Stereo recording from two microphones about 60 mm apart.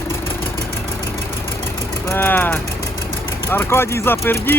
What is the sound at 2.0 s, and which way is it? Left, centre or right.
Speech, left.